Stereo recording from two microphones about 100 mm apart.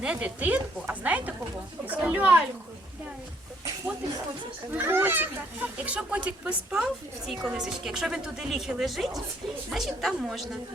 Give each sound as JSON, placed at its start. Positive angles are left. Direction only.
{"t": 0.0, "sound": "speech", "side_deg": -10}
{"t": 4.7, "sound": "a woman's voice", "side_deg": -20}